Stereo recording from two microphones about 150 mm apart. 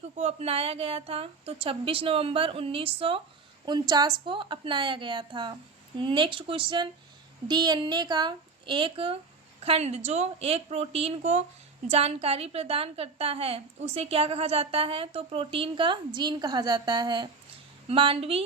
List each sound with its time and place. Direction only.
0.2 s a woman's voice: 45° right (ahead or behind)
3.7 s a woman's voice: 30° right (ahead or behind)